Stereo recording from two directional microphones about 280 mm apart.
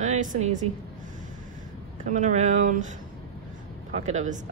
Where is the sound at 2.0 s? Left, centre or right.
Right.